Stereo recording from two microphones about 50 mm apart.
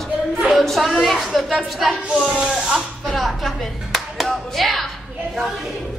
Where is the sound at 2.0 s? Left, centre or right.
Right.